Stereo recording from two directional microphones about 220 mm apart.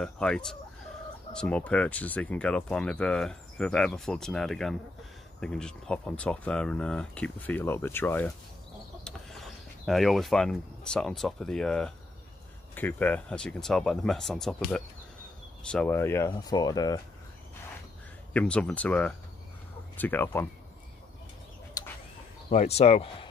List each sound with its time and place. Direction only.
0.0 s speech: 5° left (ahead or behind)
18.3 s speech: 5° left (ahead or behind)
21.8 s a sound: 15° left (ahead or behind)
22.5 s speech: 30° left (ahead or behind)